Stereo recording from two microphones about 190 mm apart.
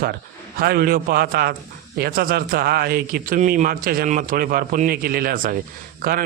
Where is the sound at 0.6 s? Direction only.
50° right (ahead or behind).